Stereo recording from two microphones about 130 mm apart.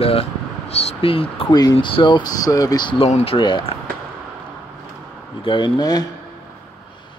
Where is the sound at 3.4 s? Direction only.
40° left (ahead or behind).